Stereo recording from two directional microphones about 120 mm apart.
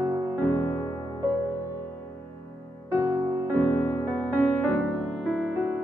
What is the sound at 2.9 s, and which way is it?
Music, 20° right (ahead or behind).